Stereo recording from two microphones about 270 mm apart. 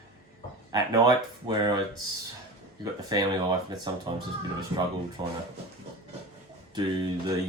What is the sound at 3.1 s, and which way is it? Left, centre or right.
Speech, centre.